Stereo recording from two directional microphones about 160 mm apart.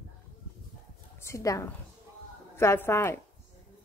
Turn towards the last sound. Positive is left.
turn(degrees=15)  # may be behind; listen again after turning